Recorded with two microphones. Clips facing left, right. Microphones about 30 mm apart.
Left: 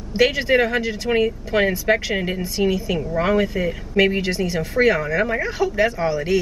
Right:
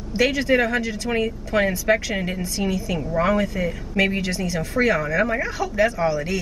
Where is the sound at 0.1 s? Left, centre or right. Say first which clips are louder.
Left 2 dB; centre.